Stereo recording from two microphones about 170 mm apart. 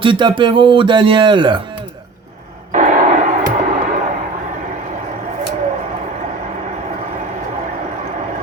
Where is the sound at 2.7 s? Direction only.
50° right (ahead or behind).